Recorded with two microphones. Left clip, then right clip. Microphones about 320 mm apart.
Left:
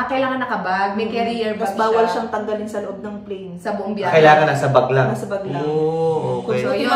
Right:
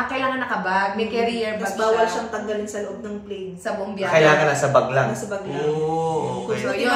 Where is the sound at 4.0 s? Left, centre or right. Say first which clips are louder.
Left 4 dB; centre.